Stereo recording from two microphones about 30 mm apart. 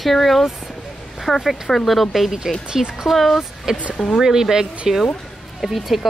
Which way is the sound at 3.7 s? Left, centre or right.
Centre.